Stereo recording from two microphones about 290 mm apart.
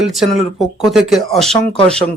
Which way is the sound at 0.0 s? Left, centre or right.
Centre.